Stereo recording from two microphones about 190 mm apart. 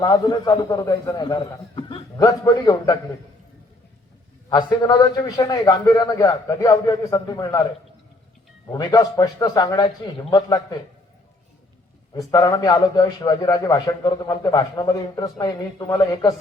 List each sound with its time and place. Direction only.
0.0 s a man's voice: 20° left (ahead or behind)
4.4 s a man's voice: 20° left (ahead or behind)
8.7 s a man's voice: 20° left (ahead or behind)
12.1 s a man's voice: 20° left (ahead or behind)